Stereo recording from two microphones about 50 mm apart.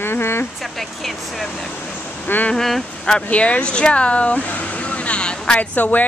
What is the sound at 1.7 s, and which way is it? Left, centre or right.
Vehicle, left.